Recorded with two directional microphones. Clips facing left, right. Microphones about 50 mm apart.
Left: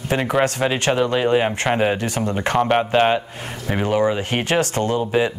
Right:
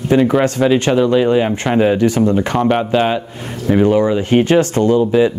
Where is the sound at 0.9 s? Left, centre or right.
Left.